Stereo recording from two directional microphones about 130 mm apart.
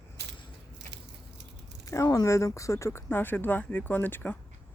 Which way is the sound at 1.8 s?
25° left (ahead or behind).